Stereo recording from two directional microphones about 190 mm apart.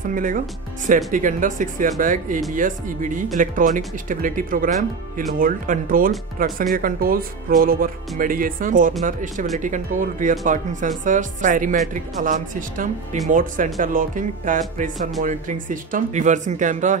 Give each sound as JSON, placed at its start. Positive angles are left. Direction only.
{"t": 0.1, "sound": "speech", "side_deg": -45}